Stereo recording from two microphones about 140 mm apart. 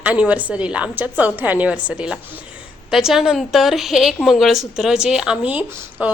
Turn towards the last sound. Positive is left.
turn(degrees=-10)  # may be behind; listen again after turning